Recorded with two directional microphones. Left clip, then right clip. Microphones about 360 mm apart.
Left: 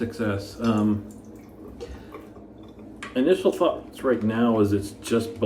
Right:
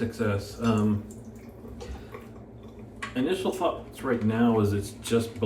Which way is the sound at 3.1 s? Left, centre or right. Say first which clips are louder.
Left 7 dB; centre.